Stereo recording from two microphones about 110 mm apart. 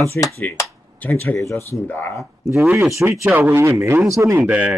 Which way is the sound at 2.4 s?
25° right (ahead or behind).